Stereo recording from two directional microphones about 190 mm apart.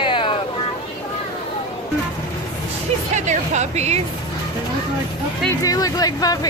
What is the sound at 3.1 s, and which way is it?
Speech, 40° right (ahead or behind).